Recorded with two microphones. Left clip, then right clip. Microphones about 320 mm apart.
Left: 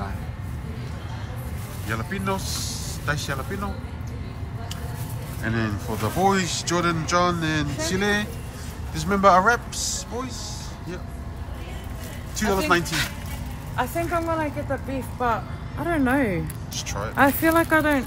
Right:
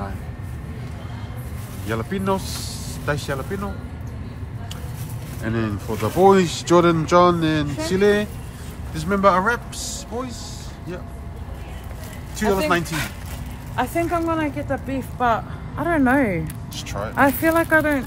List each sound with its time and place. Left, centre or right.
1.9 s speech: centre
5.4 s speech: centre
12.4 s speech: centre
13.7 s speech: right
15.1 s speech: centre